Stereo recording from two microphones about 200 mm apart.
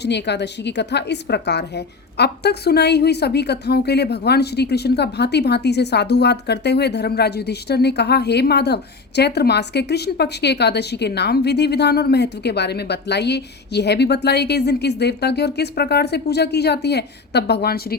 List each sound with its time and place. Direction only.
0.0 s a woman's voice: 60° left (ahead or behind)